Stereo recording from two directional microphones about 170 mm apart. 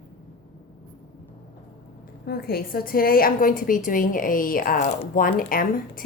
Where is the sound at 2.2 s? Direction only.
65° left (ahead or behind).